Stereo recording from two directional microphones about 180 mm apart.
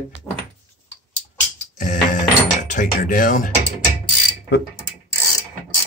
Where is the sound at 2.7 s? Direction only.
45° left (ahead or behind).